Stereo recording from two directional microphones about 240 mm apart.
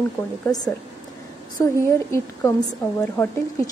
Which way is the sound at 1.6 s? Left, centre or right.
Centre.